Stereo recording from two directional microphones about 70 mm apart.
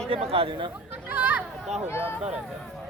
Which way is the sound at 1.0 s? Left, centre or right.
Right.